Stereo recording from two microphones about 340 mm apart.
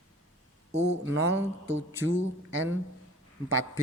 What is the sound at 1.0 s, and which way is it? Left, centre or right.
Speech, right.